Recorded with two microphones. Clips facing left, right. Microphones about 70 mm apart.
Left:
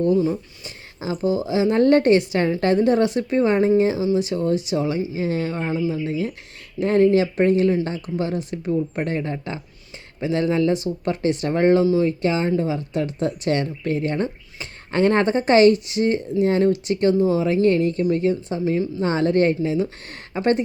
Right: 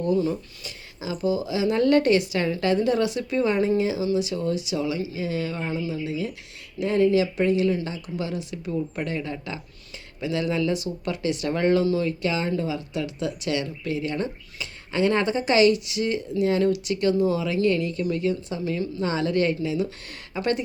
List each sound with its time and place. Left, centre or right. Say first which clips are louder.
0.0 s speech: left 4 dB; left